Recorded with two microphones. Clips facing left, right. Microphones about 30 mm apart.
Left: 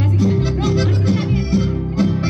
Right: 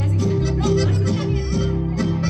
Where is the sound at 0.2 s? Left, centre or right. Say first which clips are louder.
Left 2 dB; centre.